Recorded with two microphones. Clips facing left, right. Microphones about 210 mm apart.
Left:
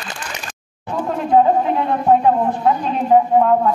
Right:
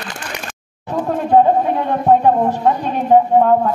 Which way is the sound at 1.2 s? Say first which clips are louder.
Right 1 dB; 40° right (ahead or behind).